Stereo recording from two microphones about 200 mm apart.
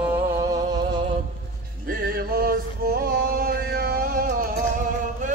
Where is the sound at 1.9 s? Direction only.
45° right (ahead or behind).